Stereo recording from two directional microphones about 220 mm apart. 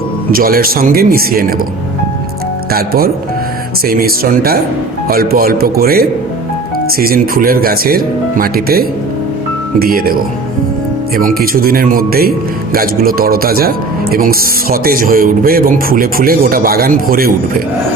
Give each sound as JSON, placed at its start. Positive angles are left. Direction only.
{"t": 0.3, "sound": "speech", "side_deg": -40}
{"t": 2.7, "sound": "speech", "side_deg": -45}
{"t": 11.2, "sound": "speech", "side_deg": -40}